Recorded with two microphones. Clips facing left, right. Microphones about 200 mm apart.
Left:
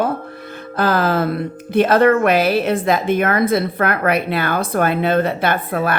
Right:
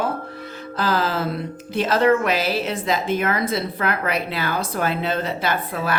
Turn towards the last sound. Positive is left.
turn(degrees=55)  # may be behind; listen again after turning